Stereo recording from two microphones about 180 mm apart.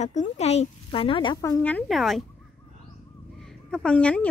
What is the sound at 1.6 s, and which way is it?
Speech, 5° left (ahead or behind).